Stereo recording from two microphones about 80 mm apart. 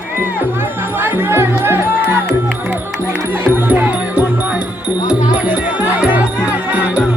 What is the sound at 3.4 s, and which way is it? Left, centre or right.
Music, right.